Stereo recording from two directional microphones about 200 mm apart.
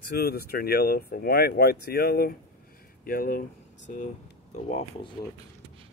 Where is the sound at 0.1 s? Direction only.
50° left (ahead or behind); by 5.1 s 35° left (ahead or behind).